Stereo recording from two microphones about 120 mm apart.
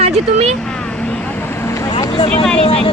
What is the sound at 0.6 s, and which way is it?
Vehicle, 5° left (ahead or behind).